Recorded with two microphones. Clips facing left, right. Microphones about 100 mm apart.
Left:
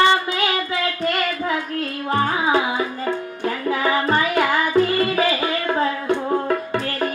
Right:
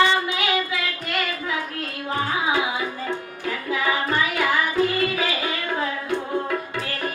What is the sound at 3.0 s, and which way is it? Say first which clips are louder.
Music: left 5 dB; 40° left (ahead or behind).